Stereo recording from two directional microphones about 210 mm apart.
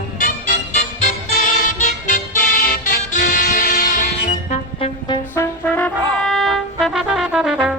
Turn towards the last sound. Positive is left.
turn(degrees=-5)  # may be behind; listen again after turning